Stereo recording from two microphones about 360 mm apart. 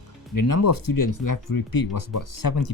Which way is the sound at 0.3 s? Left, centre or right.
Left.